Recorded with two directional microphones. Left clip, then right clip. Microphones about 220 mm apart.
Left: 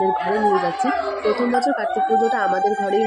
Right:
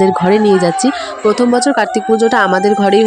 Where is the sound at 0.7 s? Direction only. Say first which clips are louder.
Right 6 dB; 45° right (ahead or behind).